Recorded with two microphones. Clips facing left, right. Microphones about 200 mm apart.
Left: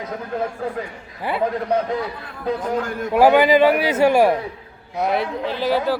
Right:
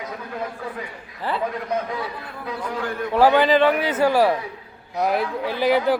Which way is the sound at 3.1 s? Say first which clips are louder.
Left 3 dB; 10° left (ahead or behind).